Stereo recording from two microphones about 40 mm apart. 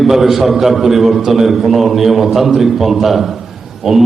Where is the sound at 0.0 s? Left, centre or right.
Centre.